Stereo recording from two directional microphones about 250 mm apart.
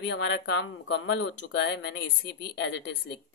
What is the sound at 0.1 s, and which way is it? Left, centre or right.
Speech, left.